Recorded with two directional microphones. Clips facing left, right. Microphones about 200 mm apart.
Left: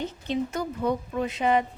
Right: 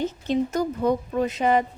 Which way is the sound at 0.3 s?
40° right (ahead or behind).